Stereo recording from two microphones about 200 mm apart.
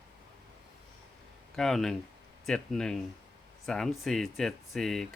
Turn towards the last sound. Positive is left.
turn(degrees=0)  # may be behind; listen again after turning